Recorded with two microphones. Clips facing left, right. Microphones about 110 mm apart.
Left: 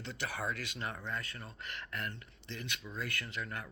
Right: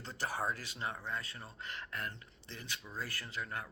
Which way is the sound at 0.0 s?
40° right (ahead or behind).